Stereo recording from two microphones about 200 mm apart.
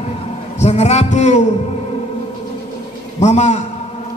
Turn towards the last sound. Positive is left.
turn(degrees=35)  # may be behind; listen again after turning